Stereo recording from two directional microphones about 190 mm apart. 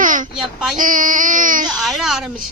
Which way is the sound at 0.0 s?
45° right (ahead or behind).